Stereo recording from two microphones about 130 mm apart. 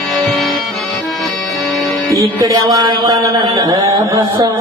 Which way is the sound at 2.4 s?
25° right (ahead or behind).